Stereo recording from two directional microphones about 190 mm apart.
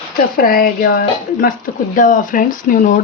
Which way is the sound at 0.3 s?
50° left (ahead or behind).